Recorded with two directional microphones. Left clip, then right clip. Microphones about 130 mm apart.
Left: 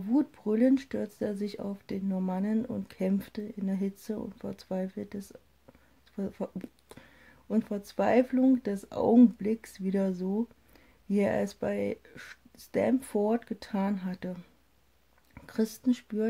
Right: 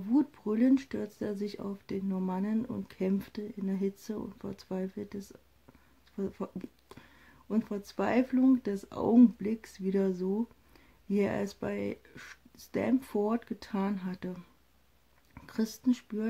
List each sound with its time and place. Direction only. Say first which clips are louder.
0.1 s speech: left 1 dB; 20° left (ahead or behind)